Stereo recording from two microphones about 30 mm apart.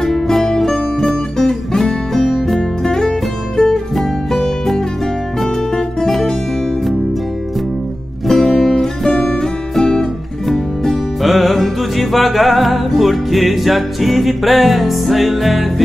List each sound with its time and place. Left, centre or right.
0.1 s music: centre
2.1 s music: centre
2.8 s music: centre
3.9 s music: centre
8.3 s music: centre
10.5 s music: centre
11.2 s music: centre